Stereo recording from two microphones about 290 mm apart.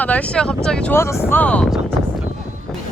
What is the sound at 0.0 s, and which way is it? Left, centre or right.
Speech, centre.